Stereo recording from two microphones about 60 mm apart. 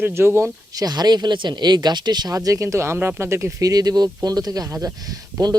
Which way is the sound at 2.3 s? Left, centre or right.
Right.